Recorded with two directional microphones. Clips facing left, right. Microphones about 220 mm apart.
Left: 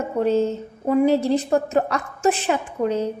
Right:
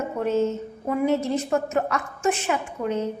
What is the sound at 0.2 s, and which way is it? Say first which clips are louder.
A woman's voice: left 4 dB; 35° left (ahead or behind).